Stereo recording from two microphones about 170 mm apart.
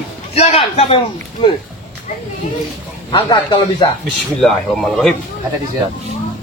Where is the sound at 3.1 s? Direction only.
30° left (ahead or behind).